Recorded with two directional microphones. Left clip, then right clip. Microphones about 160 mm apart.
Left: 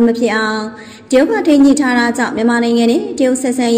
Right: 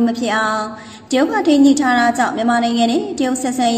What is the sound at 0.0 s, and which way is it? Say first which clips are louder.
A woman's voice: left 4 dB; 25° left (ahead or behind).